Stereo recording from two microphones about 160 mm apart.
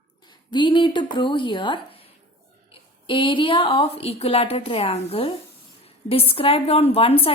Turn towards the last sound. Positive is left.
turn(degrees=35)  # may be behind; listen again after turning